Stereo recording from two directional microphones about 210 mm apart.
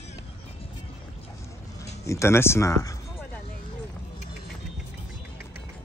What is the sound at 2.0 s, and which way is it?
Speech, 15° left (ahead or behind).